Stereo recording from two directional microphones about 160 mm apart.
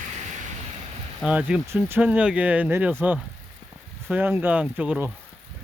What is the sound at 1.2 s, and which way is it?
Speech, 10° right (ahead or behind).